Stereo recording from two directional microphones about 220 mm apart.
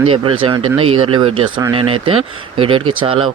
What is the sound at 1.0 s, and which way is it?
Speech, 25° right (ahead or behind).